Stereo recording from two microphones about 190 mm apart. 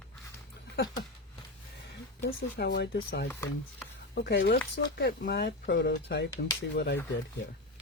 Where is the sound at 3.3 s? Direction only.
15° left (ahead or behind).